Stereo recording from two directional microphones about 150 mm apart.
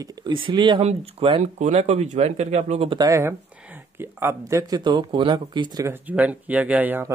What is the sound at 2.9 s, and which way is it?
Speech, 25° right (ahead or behind).